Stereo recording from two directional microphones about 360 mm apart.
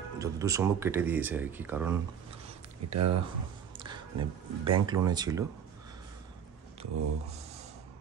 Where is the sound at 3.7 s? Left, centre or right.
Centre.